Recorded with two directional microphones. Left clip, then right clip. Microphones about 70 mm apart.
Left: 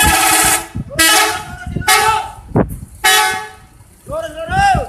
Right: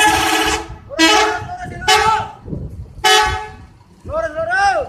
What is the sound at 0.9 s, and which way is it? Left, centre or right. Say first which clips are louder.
Vehicle: left 1 dB; left.